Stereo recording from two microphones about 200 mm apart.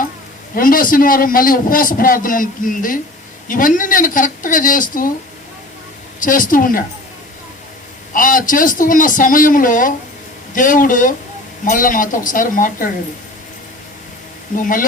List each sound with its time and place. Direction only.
0.5 s a man's voice: 45° left (ahead or behind)
6.1 s a man's voice: 40° left (ahead or behind)
8.1 s a man's voice: 40° left (ahead or behind)
14.5 s a man's voice: 40° left (ahead or behind)